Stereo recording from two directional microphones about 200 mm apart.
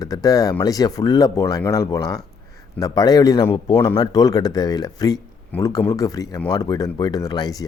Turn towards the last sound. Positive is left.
turn(degrees=20)  # may be behind; listen again after turning